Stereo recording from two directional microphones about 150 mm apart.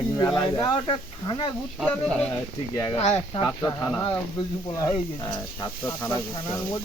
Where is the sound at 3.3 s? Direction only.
25° left (ahead or behind).